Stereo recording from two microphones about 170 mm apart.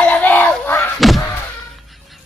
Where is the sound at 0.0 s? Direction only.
10° left (ahead or behind).